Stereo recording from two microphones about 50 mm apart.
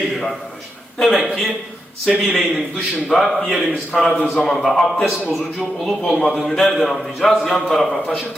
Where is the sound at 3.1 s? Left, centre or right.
Centre.